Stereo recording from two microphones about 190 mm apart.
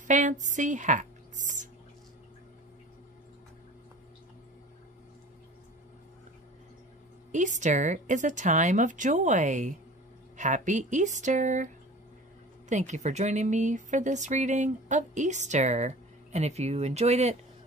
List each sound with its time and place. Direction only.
0.0 s speech: 40° right (ahead or behind)
7.3 s speech: 40° right (ahead or behind)